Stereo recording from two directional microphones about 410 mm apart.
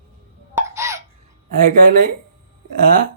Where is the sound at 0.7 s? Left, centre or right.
Centre.